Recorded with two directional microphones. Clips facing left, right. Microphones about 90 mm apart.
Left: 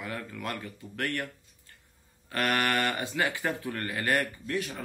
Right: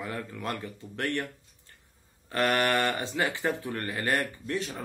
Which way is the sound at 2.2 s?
25° right (ahead or behind).